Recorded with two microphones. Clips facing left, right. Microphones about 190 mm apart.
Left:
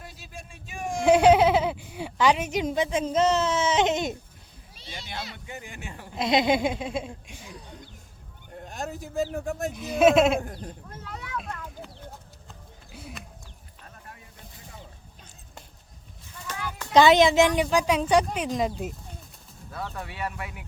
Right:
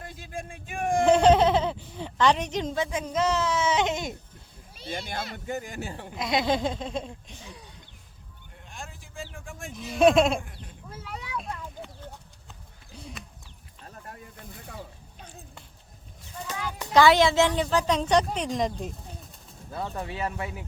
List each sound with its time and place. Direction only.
0.0 s a sound: 50° right (ahead or behind)
1.0 s speech: 10° left (ahead or behind)
4.7 s speech: 50° right (ahead or behind); by 6.1 s 35° right (ahead or behind)
6.1 s a woman's voice: 20° left (ahead or behind)
8.5 s speech: 40° left (ahead or behind)
9.7 s speech: 5° left (ahead or behind)
10.4 s speech: 40° left (ahead or behind)
10.9 s speech: 10° right (ahead or behind)
11.3 s a sound: centre (ahead or behind)
12.9 s a sound: 5° left (ahead or behind)
16.5 s a sound: 15° right (ahead or behind)
16.9 s a woman's voice: 20° left (ahead or behind); by 18.9 s 5° left (ahead or behind)
19.7 s speech: 20° right (ahead or behind)